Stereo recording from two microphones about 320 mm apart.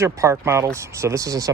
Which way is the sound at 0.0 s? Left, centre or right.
Centre.